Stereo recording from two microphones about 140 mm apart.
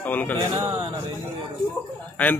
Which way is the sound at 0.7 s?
30° right (ahead or behind).